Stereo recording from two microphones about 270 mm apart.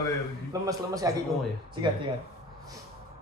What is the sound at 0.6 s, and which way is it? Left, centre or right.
Speech, centre.